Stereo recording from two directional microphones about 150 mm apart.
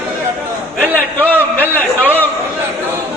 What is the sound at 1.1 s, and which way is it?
A man's voice, 10° left (ahead or behind).